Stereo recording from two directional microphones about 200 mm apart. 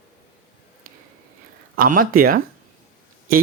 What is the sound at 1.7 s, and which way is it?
Speech, 45° right (ahead or behind).